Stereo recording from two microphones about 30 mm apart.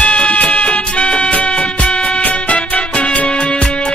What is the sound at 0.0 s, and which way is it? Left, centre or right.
Music, left.